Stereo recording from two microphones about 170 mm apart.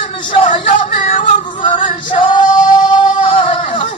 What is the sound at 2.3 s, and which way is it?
Music, 30° left (ahead or behind).